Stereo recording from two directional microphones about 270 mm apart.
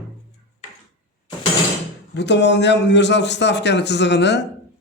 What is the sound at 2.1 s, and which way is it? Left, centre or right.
A man's voice, left.